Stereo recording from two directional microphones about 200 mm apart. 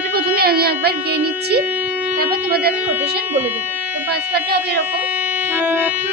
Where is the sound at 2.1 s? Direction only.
50° right (ahead or behind).